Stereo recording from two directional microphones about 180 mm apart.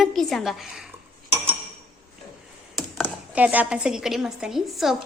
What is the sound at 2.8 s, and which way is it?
Speech, 5° right (ahead or behind).